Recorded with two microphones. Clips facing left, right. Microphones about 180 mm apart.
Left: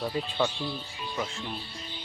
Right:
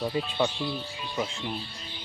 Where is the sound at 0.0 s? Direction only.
10° right (ahead or behind).